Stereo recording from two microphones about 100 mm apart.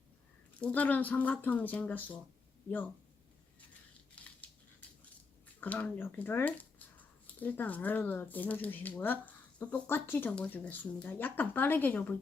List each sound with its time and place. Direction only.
0.6 s speech: 15° left (ahead or behind)
5.5 s speech: 15° left (ahead or behind)
10.3 s speech: 10° left (ahead or behind)